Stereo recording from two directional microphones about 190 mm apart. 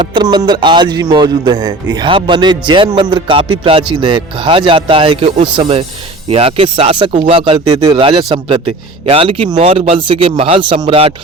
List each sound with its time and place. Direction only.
0.0 s speech: 25° right (ahead or behind)